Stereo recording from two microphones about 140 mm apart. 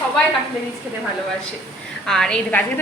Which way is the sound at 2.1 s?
5° left (ahead or behind).